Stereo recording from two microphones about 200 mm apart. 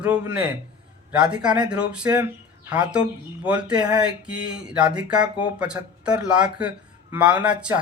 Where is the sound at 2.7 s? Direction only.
5° right (ahead or behind).